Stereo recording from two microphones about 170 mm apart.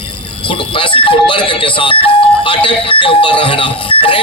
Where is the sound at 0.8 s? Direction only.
30° left (ahead or behind).